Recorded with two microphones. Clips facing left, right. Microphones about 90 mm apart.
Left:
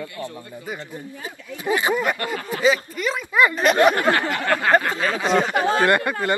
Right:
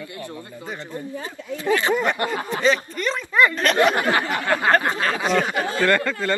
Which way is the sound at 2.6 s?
5° left (ahead or behind).